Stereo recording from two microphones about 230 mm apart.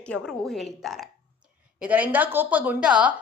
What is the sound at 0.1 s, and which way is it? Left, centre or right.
A woman's voice, centre.